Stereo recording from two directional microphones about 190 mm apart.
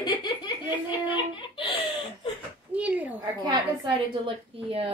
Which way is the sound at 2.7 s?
5° right (ahead or behind).